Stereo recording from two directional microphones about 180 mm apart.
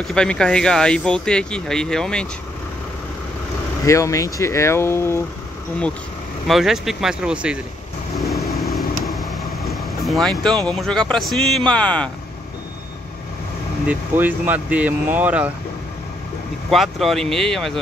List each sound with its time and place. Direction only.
0.0 s speech: 5° left (ahead or behind)
3.8 s speech: 15° left (ahead or behind)
6.4 s speech: centre (ahead or behind)
8.2 s vehicle: centre (ahead or behind)
9.7 s speech: centre (ahead or behind)
13.8 s speech: 10° right (ahead or behind)
16.7 s speech: centre (ahead or behind)